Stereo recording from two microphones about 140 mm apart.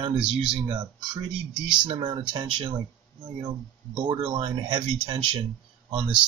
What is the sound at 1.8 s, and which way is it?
Speech, 35° right (ahead or behind).